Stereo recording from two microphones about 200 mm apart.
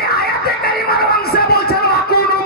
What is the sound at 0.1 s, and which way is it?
Music, 50° left (ahead or behind).